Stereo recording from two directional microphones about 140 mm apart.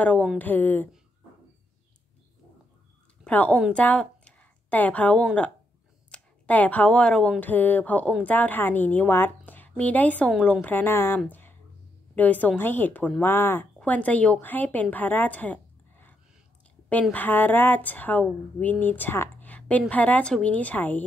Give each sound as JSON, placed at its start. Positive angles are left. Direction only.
{"t": 0.0, "sound": "speech", "side_deg": 10}
{"t": 3.3, "sound": "a woman's voice", "side_deg": 10}
{"t": 11.2, "sound": "a sound", "side_deg": 15}
{"t": 12.2, "sound": "a woman's voice", "side_deg": 10}